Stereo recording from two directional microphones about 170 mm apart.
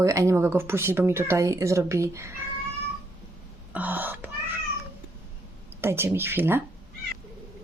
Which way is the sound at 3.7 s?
10° right (ahead or behind).